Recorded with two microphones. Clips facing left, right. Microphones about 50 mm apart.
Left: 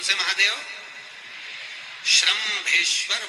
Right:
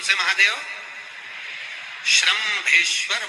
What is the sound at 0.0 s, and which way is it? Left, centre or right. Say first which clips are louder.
A man's voice: right 4 dB; right.